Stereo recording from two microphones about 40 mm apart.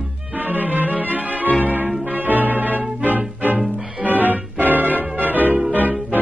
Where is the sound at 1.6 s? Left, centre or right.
Right.